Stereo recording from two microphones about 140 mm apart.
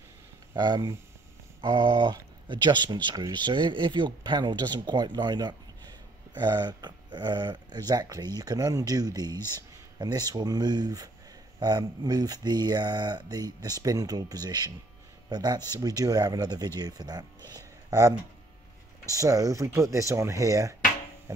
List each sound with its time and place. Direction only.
0.6 s speech: 30° right (ahead or behind)
17.5 s a sound: 25° right (ahead or behind)
19.0 s speech: 25° right (ahead or behind)